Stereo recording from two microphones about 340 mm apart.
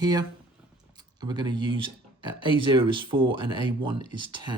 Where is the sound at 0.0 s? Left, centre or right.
Centre.